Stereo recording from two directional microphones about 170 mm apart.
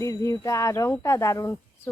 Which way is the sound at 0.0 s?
20° left (ahead or behind).